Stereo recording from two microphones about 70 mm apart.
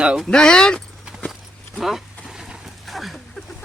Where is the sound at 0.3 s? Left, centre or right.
Centre.